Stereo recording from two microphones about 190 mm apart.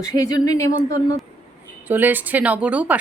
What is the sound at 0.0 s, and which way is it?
Speech, 20° left (ahead or behind).